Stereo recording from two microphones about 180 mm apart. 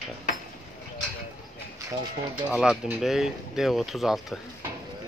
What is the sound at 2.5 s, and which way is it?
Speech, centre (ahead or behind).